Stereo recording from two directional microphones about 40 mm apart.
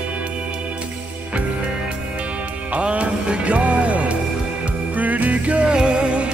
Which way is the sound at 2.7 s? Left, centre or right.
Right.